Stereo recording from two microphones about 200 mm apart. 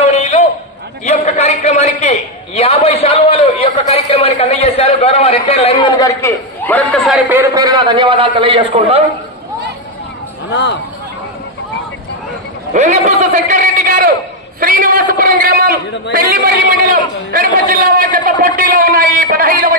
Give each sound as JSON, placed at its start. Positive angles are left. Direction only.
{"t": 0.0, "sound": "a sound", "side_deg": 35}
{"t": 1.0, "sound": "a man's voice", "side_deg": 35}
{"t": 5.9, "sound": "a man's voice", "side_deg": 15}
{"t": 10.5, "sound": "speech", "side_deg": 60}
{"t": 12.7, "sound": "a man's voice", "side_deg": -35}